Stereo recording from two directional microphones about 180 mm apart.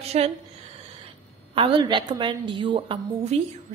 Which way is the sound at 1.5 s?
25° right (ahead or behind).